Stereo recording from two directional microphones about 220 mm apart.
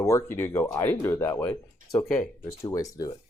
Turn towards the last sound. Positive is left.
turn(degrees=15)  # may be behind; listen again after turning